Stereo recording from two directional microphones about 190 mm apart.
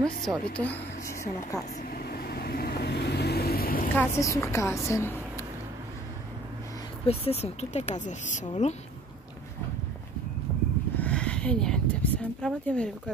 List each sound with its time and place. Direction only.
0.0 s a woman's voice: 5° left (ahead or behind)
1.8 s vehicle: 55° left (ahead or behind)
3.9 s a woman's voice: 15° left (ahead or behind)
7.1 s speech: 35° left (ahead or behind)
11.0 s speech: 5° left (ahead or behind)